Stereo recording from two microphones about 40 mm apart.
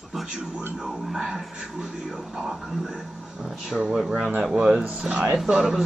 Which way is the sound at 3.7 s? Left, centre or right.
Centre.